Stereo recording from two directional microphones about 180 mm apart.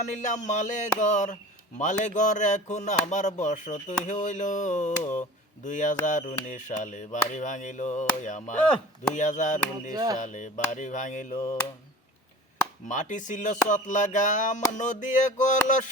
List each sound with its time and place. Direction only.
0.0 s speech: 40° left (ahead or behind)
9.9 s music: 20° right (ahead or behind)
10.2 s speech: 45° left (ahead or behind)
12.9 s speech: 45° left (ahead or behind)